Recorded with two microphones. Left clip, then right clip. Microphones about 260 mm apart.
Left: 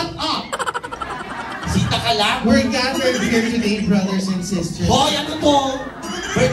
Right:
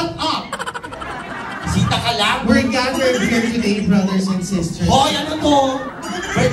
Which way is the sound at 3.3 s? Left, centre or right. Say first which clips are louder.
Even; right.